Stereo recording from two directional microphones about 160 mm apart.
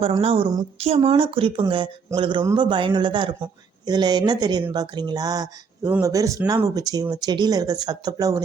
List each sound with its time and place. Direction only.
0.2 s speech: 35° right (ahead or behind)